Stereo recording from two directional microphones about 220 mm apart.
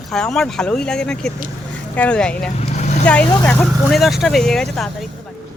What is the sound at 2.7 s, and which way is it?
Vehicle, 30° left (ahead or behind).